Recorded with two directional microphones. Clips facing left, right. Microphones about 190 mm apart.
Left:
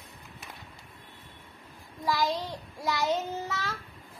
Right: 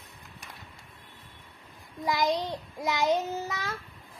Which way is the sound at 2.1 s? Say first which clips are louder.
Right 2 dB; 20° right (ahead or behind).